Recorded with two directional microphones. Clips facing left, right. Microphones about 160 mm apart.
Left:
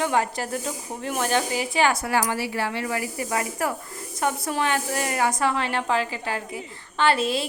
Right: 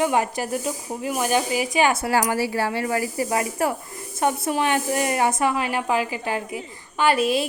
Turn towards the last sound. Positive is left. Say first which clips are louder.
# right 2 dB
turn(degrees=-15)  # may be behind; listen again after turning